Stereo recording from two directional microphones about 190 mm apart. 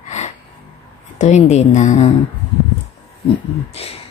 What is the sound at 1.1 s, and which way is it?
Speech, 40° left (ahead or behind).